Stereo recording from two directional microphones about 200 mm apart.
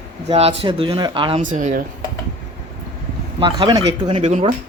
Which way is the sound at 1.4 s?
40° right (ahead or behind).